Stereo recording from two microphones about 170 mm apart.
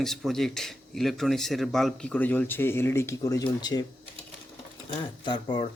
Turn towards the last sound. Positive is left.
turn(degrees=30)  # may be behind; listen again after turning